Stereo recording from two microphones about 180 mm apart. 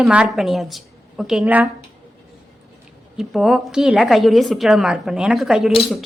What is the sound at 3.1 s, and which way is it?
A woman's voice, centre (ahead or behind).